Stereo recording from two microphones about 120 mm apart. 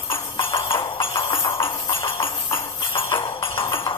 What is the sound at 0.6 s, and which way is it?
Music, 45° left (ahead or behind).